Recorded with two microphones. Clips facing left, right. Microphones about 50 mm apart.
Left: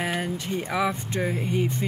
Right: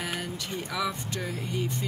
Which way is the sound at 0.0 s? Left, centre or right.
Left.